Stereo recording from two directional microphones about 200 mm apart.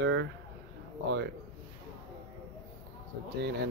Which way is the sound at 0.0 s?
65° right (ahead or behind).